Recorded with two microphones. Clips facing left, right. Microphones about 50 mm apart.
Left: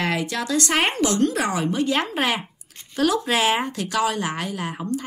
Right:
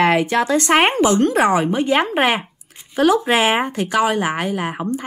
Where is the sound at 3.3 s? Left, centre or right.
Right.